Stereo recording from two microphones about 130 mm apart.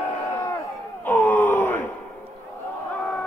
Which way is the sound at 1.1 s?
15° left (ahead or behind).